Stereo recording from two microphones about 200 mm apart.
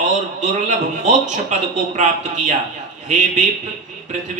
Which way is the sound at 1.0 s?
35° right (ahead or behind).